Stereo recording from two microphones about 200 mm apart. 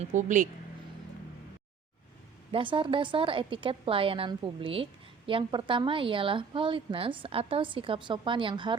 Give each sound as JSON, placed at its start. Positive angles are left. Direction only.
{"t": 0.0, "sound": "speech", "side_deg": -40}
{"t": 2.5, "sound": "a woman's voice", "side_deg": -25}